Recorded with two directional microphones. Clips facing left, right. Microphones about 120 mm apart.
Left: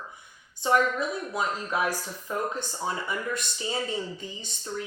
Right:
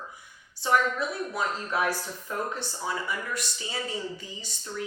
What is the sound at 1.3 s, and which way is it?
Speech, 15° left (ahead or behind).